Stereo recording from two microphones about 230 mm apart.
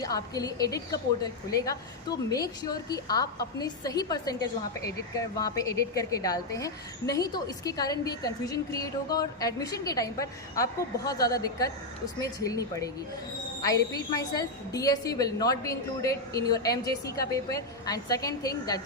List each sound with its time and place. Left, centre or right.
0.0 s a woman's voice: centre